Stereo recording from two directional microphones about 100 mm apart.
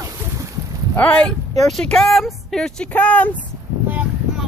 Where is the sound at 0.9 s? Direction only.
15° left (ahead or behind).